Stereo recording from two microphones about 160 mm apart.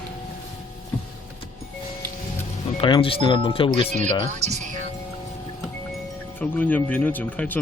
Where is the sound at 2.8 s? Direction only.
35° left (ahead or behind).